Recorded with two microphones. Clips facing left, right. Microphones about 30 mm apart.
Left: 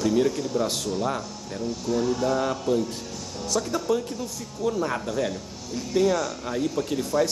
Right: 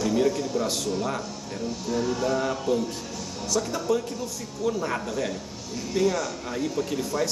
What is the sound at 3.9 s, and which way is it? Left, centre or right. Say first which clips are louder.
Speech: even; left.